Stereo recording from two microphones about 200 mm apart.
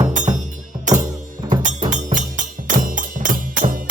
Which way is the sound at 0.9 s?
40° right (ahead or behind).